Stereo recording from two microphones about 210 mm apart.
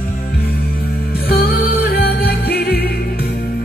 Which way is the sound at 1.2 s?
50° left (ahead or behind).